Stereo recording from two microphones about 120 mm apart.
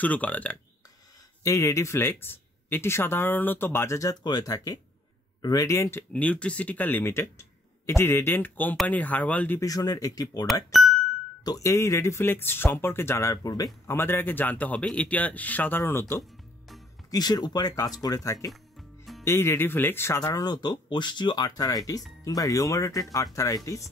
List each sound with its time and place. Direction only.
0.0 s speech: 15° left (ahead or behind)
1.4 s speech: 25° left (ahead or behind)
9.6 s speech: 30° left (ahead or behind)
10.4 s speech: centre (ahead or behind)
11.4 s speech: 30° left (ahead or behind)
17.1 s speech: 35° left (ahead or behind)
18.5 s music: centre (ahead or behind)
19.2 s speech: 20° left (ahead or behind)
20.2 s speech: 30° left (ahead or behind)